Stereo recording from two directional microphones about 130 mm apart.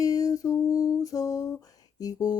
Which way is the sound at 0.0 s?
30° left (ahead or behind).